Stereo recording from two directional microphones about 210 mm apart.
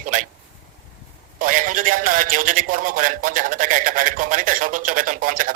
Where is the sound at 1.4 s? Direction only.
40° right (ahead or behind).